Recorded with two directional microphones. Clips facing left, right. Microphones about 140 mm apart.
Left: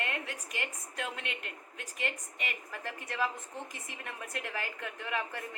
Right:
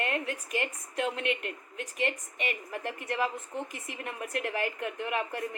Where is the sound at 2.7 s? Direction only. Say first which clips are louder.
Right 6 dB; 20° right (ahead or behind).